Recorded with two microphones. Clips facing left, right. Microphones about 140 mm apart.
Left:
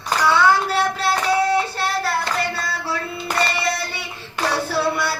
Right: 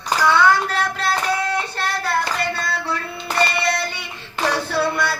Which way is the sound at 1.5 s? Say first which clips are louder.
Left 3 dB; 5° left (ahead or behind).